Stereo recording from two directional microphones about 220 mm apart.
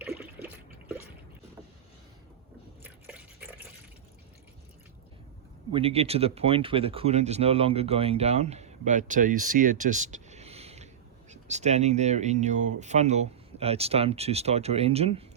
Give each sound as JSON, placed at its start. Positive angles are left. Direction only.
{"t": 0.0, "sound": "water", "side_deg": -10}
{"t": 2.8, "sound": "drip", "side_deg": -10}
{"t": 5.7, "sound": "speech", "side_deg": -25}